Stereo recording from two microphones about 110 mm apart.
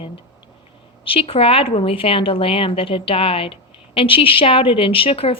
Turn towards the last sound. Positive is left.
turn(degrees=60)  # may be behind; listen again after turning